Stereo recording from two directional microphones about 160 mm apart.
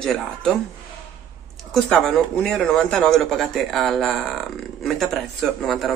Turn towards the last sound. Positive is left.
turn(degrees=0)  # may be behind; listen again after turning